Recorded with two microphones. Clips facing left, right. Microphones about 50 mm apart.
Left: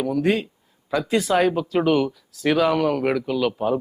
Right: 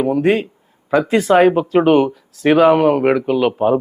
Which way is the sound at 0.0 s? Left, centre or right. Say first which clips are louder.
Right 6 dB; right.